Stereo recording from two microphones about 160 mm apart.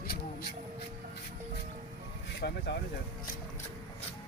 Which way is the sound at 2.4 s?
90° left.